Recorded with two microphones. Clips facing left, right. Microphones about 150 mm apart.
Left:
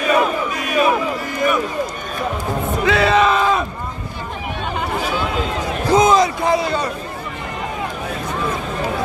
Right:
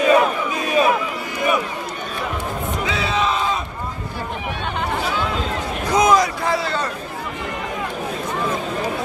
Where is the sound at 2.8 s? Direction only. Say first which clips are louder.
Left 8 dB; 65° left (ahead or behind).